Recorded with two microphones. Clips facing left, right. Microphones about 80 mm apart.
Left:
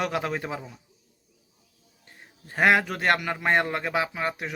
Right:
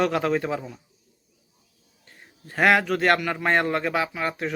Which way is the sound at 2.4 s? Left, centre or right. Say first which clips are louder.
Right 1 dB; centre.